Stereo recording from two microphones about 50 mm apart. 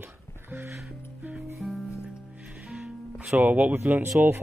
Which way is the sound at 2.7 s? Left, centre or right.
Right.